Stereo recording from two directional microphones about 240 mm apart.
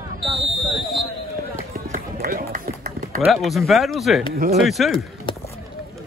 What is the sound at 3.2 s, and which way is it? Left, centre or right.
Speech, centre.